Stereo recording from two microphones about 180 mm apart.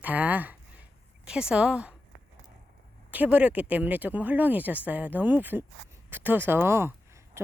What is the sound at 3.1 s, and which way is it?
Speech, 10° right (ahead or behind).